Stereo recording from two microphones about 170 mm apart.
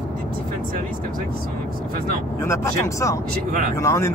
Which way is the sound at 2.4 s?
15° left (ahead or behind).